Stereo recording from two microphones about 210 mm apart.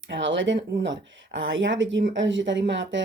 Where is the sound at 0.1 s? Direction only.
60° right (ahead or behind).